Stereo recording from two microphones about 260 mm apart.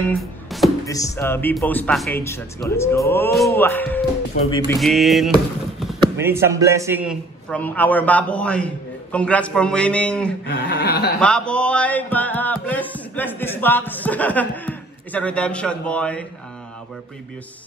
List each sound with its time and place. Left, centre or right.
0.2 s music: centre
0.8 s speech: centre
7.4 s speech: centre
10.4 s a sound: left
11.1 s speech: centre